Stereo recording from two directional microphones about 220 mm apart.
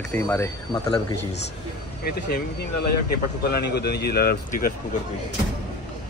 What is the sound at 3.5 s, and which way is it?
Speech, 45° left (ahead or behind).